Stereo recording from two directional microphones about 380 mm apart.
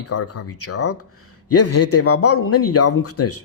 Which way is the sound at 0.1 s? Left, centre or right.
Left.